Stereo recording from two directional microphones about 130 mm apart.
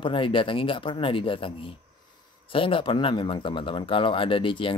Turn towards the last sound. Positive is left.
turn(degrees=40)  # may be behind; listen again after turning